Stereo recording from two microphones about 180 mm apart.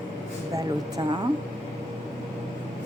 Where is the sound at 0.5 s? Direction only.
25° right (ahead or behind).